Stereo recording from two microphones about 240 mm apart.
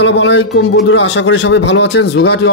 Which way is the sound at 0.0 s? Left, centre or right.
Left.